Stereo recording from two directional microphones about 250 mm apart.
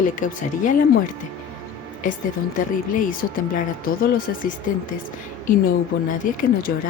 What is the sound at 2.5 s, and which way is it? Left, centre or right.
Speech, left.